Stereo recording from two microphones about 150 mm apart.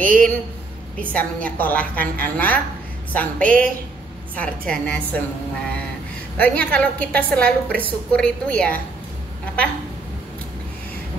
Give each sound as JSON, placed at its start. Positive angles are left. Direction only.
{"t": 0.0, "sound": "speech", "side_deg": -65}
{"t": 0.9, "sound": "a woman's voice", "side_deg": 10}
{"t": 6.3, "sound": "a woman's voice", "side_deg": 10}